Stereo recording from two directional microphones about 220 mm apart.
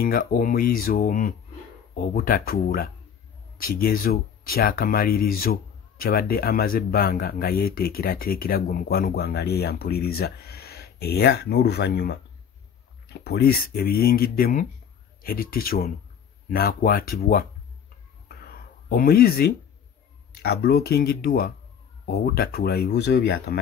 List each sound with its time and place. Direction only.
0.0 s speech: 40° left (ahead or behind)
18.3 s a sound: 45° left (ahead or behind)
20.4 s speech: 45° left (ahead or behind)